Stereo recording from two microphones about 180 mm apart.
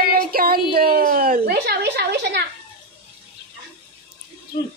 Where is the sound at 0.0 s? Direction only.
55° right (ahead or behind).